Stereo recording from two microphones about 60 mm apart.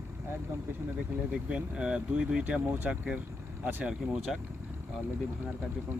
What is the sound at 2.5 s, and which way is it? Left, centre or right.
Speech, right.